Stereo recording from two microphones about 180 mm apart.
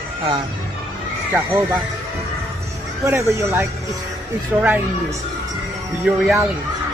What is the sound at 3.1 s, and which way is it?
Speech, 15° right (ahead or behind).